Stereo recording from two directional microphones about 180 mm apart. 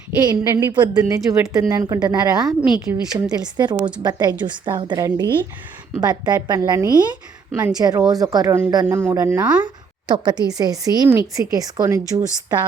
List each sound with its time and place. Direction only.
0.2 s speech: 20° right (ahead or behind)
7.5 s speech: 10° right (ahead or behind)
10.1 s speech: 25° right (ahead or behind)